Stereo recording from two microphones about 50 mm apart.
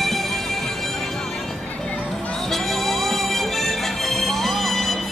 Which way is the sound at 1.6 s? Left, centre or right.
Left.